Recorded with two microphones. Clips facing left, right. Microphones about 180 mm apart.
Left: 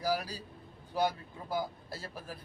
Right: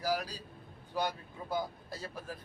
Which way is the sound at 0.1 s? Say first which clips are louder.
Even; 10° left (ahead or behind).